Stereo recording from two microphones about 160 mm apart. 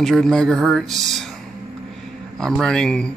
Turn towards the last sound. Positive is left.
turn(degrees=5)  # may be behind; listen again after turning